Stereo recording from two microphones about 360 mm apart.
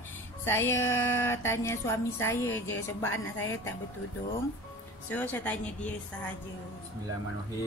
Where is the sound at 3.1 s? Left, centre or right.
Left.